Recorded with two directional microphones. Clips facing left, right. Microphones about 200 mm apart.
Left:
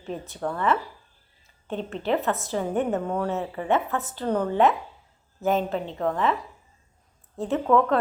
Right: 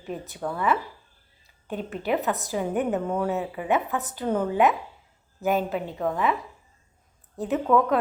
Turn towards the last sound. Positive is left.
turn(degrees=-10)  # may be behind; listen again after turning